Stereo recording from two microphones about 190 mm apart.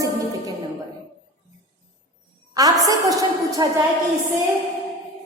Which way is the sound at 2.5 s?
20° right (ahead or behind).